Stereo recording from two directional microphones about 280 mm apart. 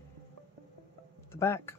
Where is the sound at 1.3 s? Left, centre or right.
Centre.